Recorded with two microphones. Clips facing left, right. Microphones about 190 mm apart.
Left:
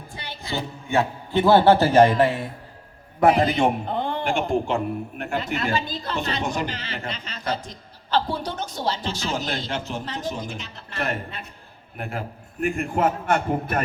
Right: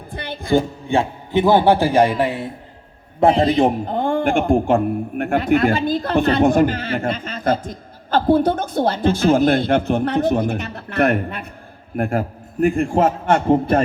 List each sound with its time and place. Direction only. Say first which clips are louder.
0.1 s a sound: right 13 dB; 55° right (ahead or behind)
0.9 s a man's voice: right 3 dB; 30° right (ahead or behind)
1.3 s a man's voice: right 2 dB; 15° right (ahead or behind)
3.2 s a man's voice: right 4 dB; 30° right (ahead or behind); by 11.4 s 60° right (ahead or behind)
11.9 s a man's voice: right 11 dB; 50° right (ahead or behind); by 13.8 s 25° right (ahead or behind)